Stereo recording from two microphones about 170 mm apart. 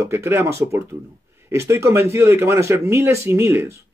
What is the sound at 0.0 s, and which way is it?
Speech, 15° right (ahead or behind).